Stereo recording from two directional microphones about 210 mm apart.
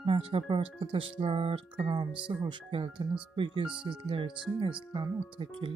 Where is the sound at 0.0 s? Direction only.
25° right (ahead or behind).